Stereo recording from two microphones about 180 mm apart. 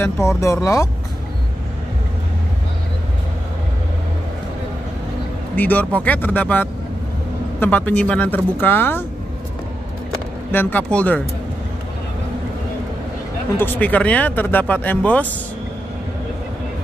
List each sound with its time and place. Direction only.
0.4 s speech: 15° left (ahead or behind)
5.6 s speech: 10° left (ahead or behind)
10.5 s speech: 10° left (ahead or behind)
13.6 s speech: 10° left (ahead or behind)